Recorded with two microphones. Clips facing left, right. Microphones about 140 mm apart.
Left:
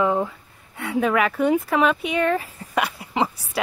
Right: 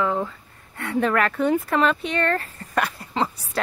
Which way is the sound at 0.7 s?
5° left (ahead or behind).